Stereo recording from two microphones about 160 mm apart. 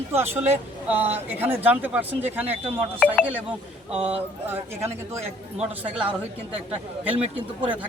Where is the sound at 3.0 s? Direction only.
5° left (ahead or behind).